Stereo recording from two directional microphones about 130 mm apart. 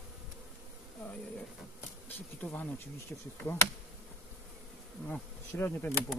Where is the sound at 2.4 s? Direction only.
10° left (ahead or behind).